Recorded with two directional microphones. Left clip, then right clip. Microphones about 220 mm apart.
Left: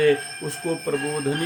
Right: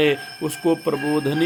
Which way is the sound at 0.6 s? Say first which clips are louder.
Right 7 dB; 40° right (ahead or behind).